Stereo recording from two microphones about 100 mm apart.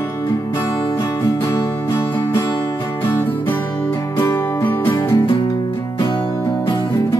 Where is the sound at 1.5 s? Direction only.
30° left (ahead or behind).